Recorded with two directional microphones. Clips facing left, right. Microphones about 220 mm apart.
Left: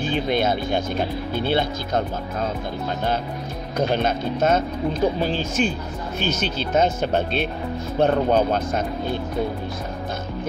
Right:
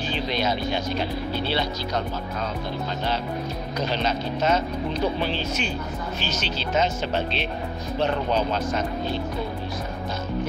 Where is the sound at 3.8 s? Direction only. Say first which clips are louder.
Left 5 dB; 50° left (ahead or behind).